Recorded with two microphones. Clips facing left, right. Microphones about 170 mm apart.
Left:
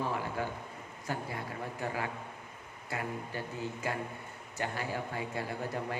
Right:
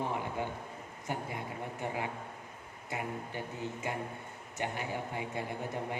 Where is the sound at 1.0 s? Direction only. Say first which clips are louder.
Even; 20° right (ahead or behind).